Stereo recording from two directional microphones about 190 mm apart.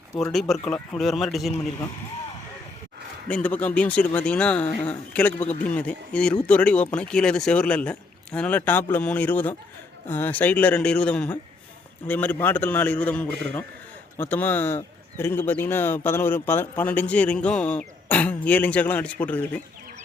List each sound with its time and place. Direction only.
0.2 s speech: centre (ahead or behind)
3.2 s speech: 5° left (ahead or behind)